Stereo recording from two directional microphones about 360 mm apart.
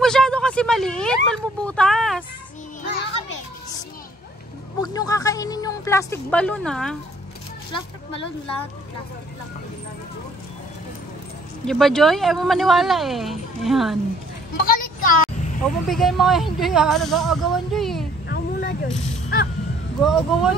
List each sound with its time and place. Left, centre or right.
0.0 s a sound: centre
2.8 s children playing: left
4.7 s speech: centre
11.6 s speech: centre
14.6 s speech: left
15.6 s speech: centre
18.3 s a sound: left
18.9 s speech: centre